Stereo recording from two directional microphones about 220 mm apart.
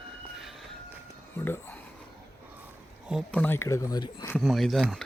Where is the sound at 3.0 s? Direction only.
Centre (ahead or behind); by 4.3 s 20° left (ahead or behind).